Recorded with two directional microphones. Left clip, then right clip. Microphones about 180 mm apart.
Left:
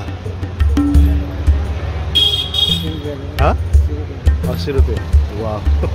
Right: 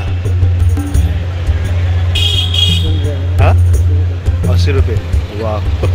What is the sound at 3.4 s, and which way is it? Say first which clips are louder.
Speech: even; 20° left (ahead or behind).